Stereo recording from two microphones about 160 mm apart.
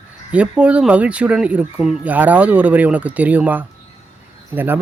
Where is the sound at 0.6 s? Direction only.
5° right (ahead or behind).